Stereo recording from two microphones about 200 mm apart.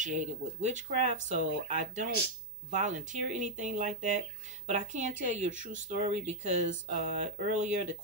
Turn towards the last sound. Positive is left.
turn(degrees=-35)  # may be behind; listen again after turning